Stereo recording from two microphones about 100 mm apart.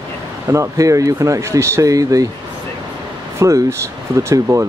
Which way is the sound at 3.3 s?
30° right (ahead or behind).